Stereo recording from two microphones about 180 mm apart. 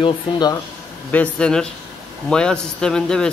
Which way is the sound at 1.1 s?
5° left (ahead or behind).